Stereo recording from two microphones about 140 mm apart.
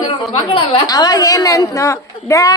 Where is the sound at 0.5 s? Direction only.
35° left (ahead or behind).